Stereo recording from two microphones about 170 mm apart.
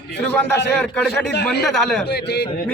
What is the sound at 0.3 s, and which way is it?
Speech, 10° left (ahead or behind).